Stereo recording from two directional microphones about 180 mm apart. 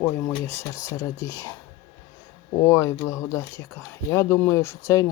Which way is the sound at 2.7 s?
15° left (ahead or behind).